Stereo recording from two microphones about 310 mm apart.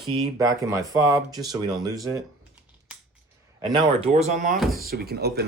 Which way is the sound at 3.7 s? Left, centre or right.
Centre.